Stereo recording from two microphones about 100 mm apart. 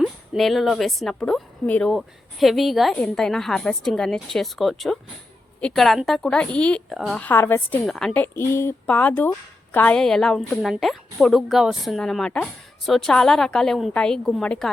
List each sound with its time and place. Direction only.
0.0 s a woman's voice: centre (ahead or behind)
6.9 s a woman's voice: centre (ahead or behind)
7.2 s speech: 20° left (ahead or behind)
7.9 s a woman's voice: 5° left (ahead or behind)
8.2 s a woman's voice: 25° left (ahead or behind)
10.0 s a woman's voice: 5° left (ahead or behind)